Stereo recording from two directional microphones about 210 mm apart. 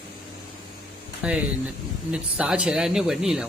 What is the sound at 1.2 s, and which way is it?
Speech, 5° right (ahead or behind).